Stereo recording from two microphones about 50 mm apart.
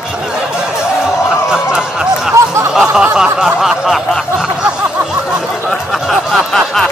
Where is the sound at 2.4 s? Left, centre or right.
Right.